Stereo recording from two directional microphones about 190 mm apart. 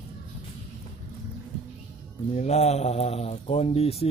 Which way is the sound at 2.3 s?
35° left (ahead or behind).